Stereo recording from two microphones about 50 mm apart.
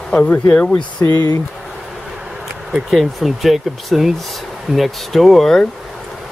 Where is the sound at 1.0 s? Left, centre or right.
Left.